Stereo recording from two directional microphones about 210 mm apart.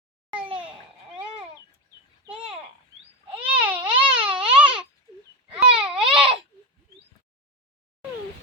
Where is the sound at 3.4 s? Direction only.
5° right (ahead or behind).